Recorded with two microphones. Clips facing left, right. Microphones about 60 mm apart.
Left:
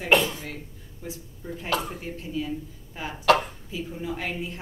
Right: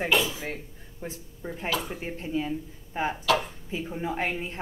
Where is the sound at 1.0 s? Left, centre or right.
Right.